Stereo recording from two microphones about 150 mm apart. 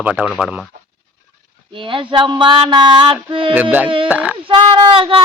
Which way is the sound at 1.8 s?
35° right (ahead or behind).